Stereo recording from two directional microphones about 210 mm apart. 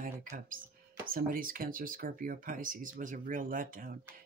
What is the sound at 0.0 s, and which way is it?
Speech, 40° right (ahead or behind).